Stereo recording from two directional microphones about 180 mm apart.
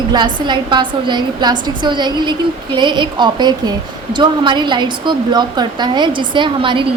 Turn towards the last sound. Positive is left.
turn(degrees=-25)  # may be behind; listen again after turning